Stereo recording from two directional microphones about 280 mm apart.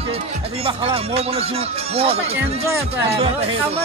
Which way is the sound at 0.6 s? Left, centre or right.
Centre.